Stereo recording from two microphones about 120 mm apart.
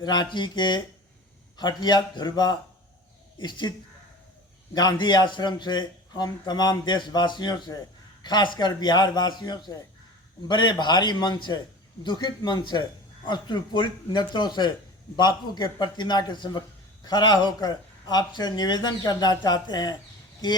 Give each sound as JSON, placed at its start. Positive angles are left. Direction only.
{"t": 0.0, "sound": "a man's voice", "side_deg": 35}
{"t": 4.7, "sound": "a man's voice", "side_deg": 35}